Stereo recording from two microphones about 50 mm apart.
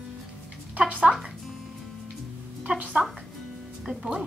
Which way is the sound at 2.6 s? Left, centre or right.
Right.